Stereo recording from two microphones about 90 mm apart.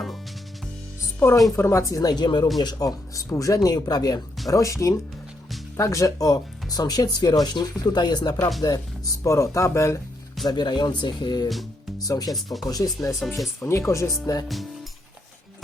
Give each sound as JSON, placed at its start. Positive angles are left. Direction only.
{"t": 1.5, "sound": "speech", "side_deg": 30}
{"t": 4.4, "sound": "speech", "side_deg": 35}
{"t": 9.2, "sound": "speech", "side_deg": 35}
{"t": 10.4, "sound": "speech", "side_deg": 55}
{"t": 12.3, "sound": "speech", "side_deg": 0}
{"t": 12.6, "sound": "speech", "side_deg": 45}
{"t": 13.1, "sound": "speech", "side_deg": 0}
{"t": 13.6, "sound": "speech", "side_deg": 30}
{"t": 14.4, "sound": "speech", "side_deg": 0}